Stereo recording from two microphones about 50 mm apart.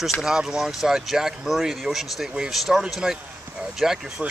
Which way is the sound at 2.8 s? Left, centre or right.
Centre.